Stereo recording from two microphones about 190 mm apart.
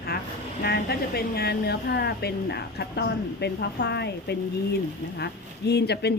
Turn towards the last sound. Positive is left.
turn(degrees=60)  # may be behind; listen again after turning